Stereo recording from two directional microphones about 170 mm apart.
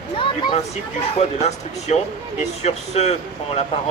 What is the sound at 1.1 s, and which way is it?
Speech, 40° left (ahead or behind).